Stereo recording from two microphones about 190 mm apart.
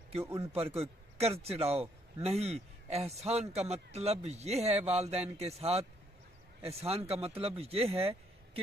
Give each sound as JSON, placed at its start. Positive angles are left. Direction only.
{"t": 0.2, "sound": "a man's voice", "side_deg": -15}
{"t": 0.5, "sound": "a man's voice", "side_deg": -30}